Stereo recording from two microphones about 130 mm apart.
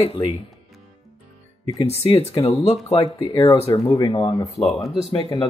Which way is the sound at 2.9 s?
35° left (ahead or behind).